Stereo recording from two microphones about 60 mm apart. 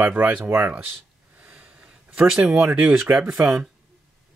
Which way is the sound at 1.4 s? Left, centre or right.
Right.